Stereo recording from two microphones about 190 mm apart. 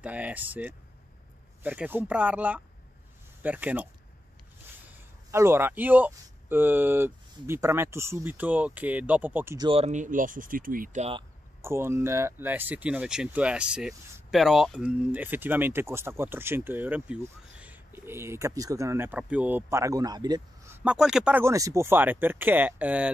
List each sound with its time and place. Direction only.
0.0 s speech: 5° right (ahead or behind)
9.7 s speech: 35° right (ahead or behind)
11.6 s speech: 15° right (ahead or behind)